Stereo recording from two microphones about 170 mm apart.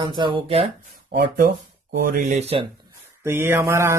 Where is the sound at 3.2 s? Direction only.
15° right (ahead or behind).